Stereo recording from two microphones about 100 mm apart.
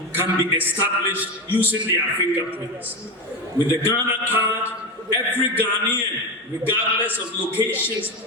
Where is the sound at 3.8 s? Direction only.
25° left (ahead or behind).